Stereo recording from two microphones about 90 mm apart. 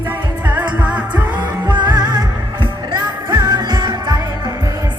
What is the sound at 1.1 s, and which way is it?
Music, 55° right (ahead or behind).